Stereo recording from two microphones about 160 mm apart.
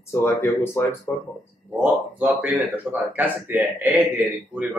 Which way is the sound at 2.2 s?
10° right (ahead or behind).